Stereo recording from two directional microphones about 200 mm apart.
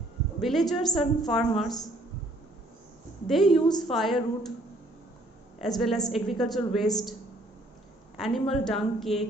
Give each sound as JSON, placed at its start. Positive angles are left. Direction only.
{"t": 0.4, "sound": "a woman's voice", "side_deg": 0}
{"t": 3.2, "sound": "a woman's voice", "side_deg": 0}
{"t": 3.6, "sound": "a woman's voice", "side_deg": 20}
{"t": 3.8, "sound": "a woman's voice", "side_deg": 0}
{"t": 5.5, "sound": "a woman's voice", "side_deg": 0}
{"t": 8.2, "sound": "a woman's voice", "side_deg": 0}